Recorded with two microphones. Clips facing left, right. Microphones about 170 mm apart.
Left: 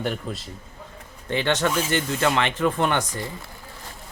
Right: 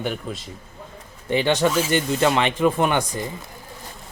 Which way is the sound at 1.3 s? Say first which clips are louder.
Right 3 dB; 15° right (ahead or behind).